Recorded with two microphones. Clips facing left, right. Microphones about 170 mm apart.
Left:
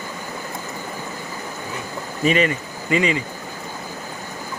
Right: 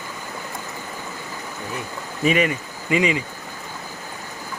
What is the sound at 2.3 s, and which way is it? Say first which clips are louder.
Speech: left 1 dB; 10° right (ahead or behind).